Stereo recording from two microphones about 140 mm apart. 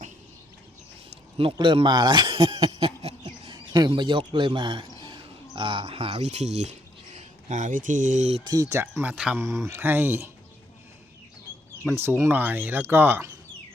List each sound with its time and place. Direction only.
1.1 s speech: 40° right (ahead or behind); by 8.4 s 60° right (ahead or behind)
8.4 s speech: 25° right (ahead or behind); by 9.4 s 5° right (ahead or behind)
9.4 s speech: 20° right (ahead or behind)
11.9 s speech: 15° right (ahead or behind)